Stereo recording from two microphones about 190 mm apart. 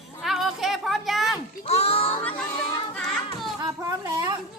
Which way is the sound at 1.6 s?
35° left (ahead or behind).